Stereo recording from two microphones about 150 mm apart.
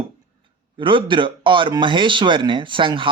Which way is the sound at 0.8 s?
30° right (ahead or behind).